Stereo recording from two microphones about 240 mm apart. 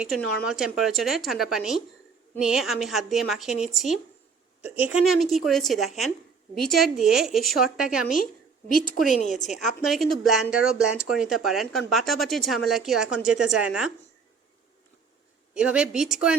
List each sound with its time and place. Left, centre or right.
0.0 s speech: centre
9.0 s a woman's voice: left
9.5 s speech: centre
15.5 s speech: centre